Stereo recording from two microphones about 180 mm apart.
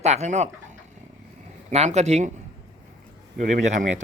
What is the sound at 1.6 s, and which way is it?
Speech, 40° right (ahead or behind).